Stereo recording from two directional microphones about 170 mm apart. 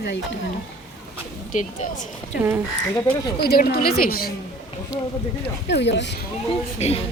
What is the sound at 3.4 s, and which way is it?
Speech, 65° left (ahead or behind).